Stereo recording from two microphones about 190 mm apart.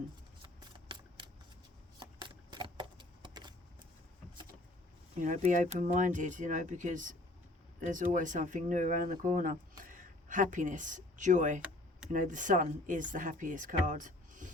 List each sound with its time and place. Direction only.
0.4 s a sound: 25° right (ahead or behind)
2.5 s keys jangling: 25° right (ahead or behind)
5.2 s speech: 40° right (ahead or behind)